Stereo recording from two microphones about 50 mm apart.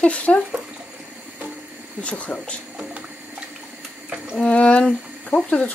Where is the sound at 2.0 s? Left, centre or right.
Left.